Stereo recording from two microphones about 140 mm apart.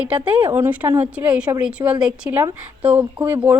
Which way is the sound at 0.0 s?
10° right (ahead or behind).